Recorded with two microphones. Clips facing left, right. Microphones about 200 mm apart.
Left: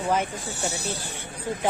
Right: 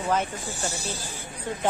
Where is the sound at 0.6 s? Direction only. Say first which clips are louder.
Left 3 dB; 65° left (ahead or behind).